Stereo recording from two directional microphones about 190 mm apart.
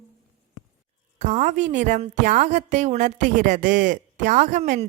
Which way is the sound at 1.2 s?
40° right (ahead or behind).